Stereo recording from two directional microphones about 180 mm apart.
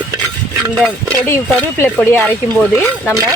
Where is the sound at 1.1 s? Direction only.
10° left (ahead or behind).